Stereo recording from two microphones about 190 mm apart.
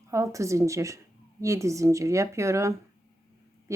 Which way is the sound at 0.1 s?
15° right (ahead or behind).